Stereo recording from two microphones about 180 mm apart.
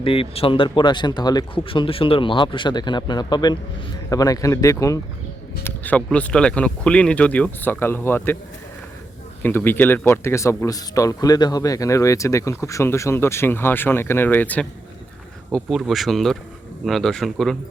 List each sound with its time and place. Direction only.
0.0 s speech: 30° left (ahead or behind); by 8.4 s 10° left (ahead or behind)
9.4 s speech: 10° left (ahead or behind)
15.5 s speech: centre (ahead or behind)